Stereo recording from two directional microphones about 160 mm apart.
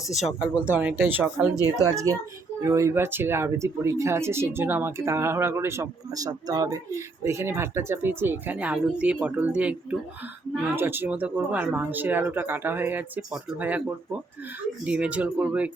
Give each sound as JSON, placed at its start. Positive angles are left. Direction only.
{"t": 0.3, "sound": "speech", "side_deg": -10}
{"t": 2.6, "sound": "speech", "side_deg": -20}
{"t": 10.8, "sound": "speech", "side_deg": -15}